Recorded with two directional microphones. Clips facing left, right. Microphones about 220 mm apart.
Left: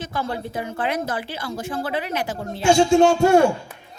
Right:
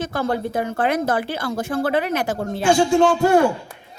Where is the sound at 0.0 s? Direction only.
50° right (ahead or behind).